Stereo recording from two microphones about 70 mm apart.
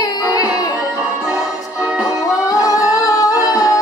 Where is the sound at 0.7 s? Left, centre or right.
Centre.